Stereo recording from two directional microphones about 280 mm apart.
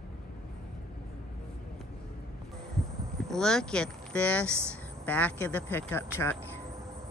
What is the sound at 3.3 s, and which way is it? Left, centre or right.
Speech, centre.